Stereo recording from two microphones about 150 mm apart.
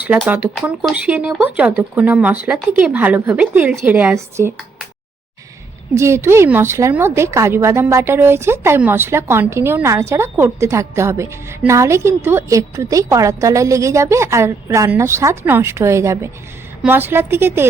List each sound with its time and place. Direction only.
0.3 s speech: 10° right (ahead or behind)
5.9 s a woman's voice: 20° right (ahead or behind)